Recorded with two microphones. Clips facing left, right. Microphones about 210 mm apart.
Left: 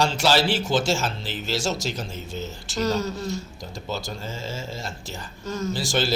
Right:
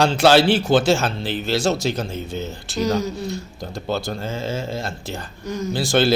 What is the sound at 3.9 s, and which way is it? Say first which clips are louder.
A man's voice: right 7 dB; 60° right (ahead or behind).